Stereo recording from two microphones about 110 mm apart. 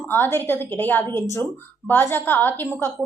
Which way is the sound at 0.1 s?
20° left (ahead or behind).